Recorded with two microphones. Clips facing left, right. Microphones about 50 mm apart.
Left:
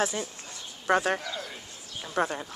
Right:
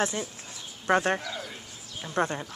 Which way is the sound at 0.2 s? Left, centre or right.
Centre.